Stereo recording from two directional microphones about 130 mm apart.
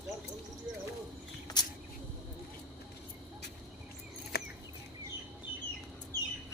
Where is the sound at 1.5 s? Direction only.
30° left (ahead or behind).